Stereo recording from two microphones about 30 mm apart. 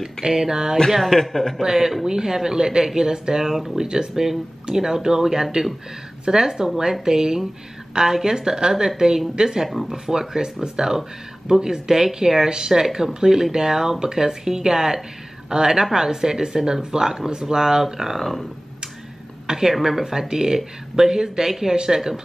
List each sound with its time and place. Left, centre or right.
0.0 s speech: centre
1.0 s a man's voice: centre
1.6 s speech: centre
4.1 s speech: centre
9.7 s speech: centre
18.2 s speech: centre
19.4 s speech: centre